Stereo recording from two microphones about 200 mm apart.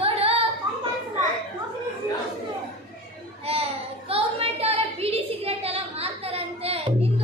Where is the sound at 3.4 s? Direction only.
30° right (ahead or behind).